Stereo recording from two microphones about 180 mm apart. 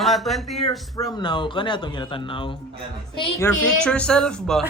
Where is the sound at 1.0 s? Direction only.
25° left (ahead or behind).